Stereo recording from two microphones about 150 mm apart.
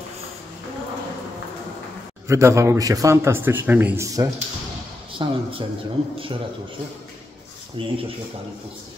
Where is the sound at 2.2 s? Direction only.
20° right (ahead or behind).